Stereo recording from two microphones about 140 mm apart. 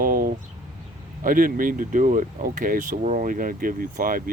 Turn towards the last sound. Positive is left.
turn(degrees=-85)